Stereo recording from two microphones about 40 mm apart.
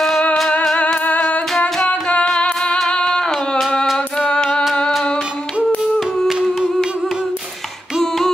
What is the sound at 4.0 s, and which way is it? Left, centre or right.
Music, left.